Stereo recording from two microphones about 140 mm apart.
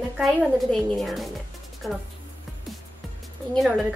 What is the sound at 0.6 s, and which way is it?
Speech, centre (ahead or behind).